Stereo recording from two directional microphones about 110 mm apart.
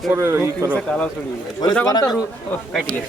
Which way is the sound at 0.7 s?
10° left (ahead or behind).